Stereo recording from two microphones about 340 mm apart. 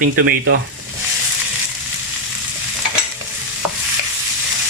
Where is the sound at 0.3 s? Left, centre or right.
Right.